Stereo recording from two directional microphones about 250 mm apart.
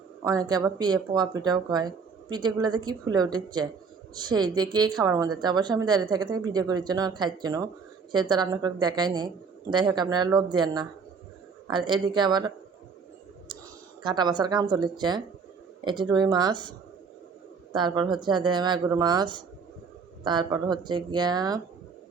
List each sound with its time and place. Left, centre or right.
0.3 s speech: centre
14.0 s speech: centre